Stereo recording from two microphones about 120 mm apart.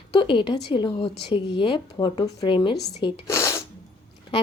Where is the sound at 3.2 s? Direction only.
25° left (ahead or behind).